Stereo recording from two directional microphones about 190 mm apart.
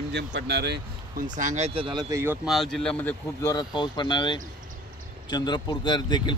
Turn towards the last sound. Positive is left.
turn(degrees=25)  # may be behind; listen again after turning